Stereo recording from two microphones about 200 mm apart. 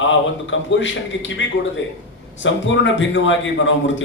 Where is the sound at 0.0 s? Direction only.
70° left (ahead or behind).